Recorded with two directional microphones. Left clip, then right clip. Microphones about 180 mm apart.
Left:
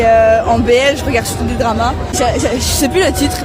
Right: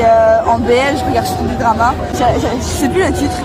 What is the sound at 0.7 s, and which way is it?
Speech, 45° left (ahead or behind).